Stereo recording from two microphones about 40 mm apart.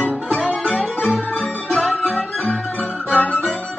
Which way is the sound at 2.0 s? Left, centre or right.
Left.